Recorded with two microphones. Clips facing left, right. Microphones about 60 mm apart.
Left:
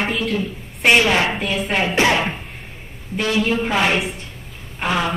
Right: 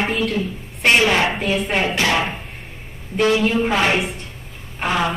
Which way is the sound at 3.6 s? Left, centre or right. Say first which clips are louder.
Right 1 dB; centre.